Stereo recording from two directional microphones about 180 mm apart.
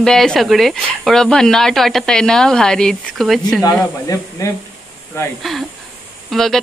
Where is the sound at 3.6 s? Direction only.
15° left (ahead or behind).